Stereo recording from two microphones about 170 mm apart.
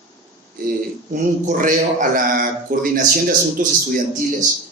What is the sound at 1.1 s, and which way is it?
A man's voice, 50° right (ahead or behind).